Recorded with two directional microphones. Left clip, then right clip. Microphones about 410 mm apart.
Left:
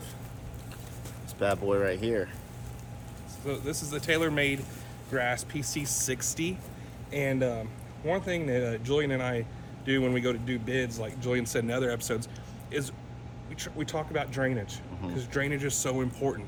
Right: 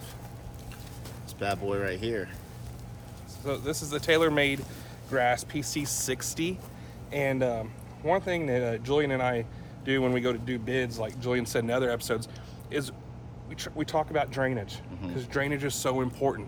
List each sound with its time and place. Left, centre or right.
1.4 s speech: centre
3.4 s speech: centre